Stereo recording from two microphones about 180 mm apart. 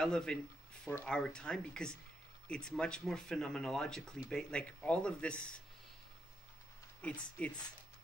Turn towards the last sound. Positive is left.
turn(degrees=5)  # may be behind; listen again after turning